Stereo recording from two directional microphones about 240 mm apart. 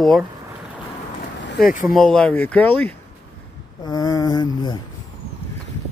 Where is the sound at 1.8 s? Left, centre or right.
Centre.